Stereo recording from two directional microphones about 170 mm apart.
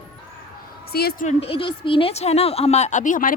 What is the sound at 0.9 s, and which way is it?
Speech, 65° left (ahead or behind).